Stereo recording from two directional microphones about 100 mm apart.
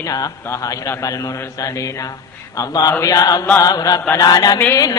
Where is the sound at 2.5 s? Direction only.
35° left (ahead or behind).